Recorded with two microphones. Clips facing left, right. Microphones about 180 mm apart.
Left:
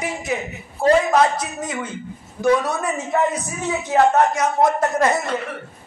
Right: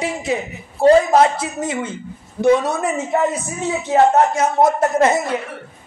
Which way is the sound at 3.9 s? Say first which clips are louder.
Right 2 dB; 25° right (ahead or behind).